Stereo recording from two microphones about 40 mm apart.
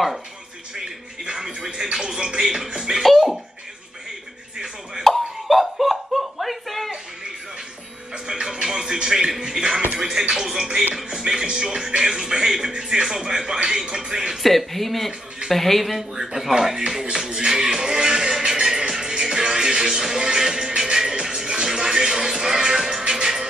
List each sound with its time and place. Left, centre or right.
1.2 s speech: centre
2.4 s speech: centre
2.7 s music: centre
3.0 s speech: centre
5.0 s laughter: centre
8.3 s music: centre
9.9 s speech: centre
11.4 s music: right
12.0 s speech: centre
14.3 s speech: centre
16.0 s speech: centre
21.0 s music: centre